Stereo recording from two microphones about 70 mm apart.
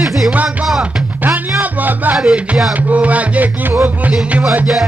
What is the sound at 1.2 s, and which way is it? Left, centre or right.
Music, right.